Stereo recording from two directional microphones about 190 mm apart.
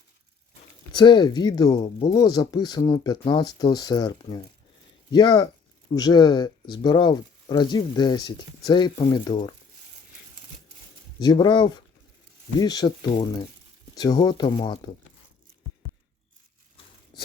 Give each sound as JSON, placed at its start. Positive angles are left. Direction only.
{"t": 0.9, "sound": "speech", "side_deg": 25}
{"t": 11.2, "sound": "speech", "side_deg": 20}